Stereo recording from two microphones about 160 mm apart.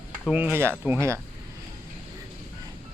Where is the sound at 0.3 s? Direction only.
5° right (ahead or behind).